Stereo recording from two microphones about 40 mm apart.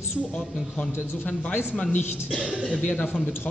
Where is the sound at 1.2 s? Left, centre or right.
Left.